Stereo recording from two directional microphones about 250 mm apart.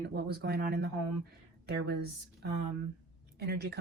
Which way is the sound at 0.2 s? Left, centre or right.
Right.